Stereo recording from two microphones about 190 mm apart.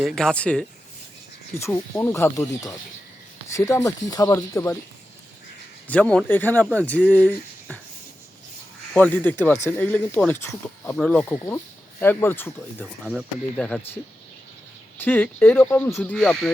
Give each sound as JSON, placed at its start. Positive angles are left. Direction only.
{"t": 0.0, "sound": "speech", "side_deg": 0}
{"t": 5.9, "sound": "speech", "side_deg": 5}
{"t": 8.9, "sound": "speech", "side_deg": 10}
{"t": 13.1, "sound": "speech", "side_deg": -5}
{"t": 13.7, "sound": "speech", "side_deg": 5}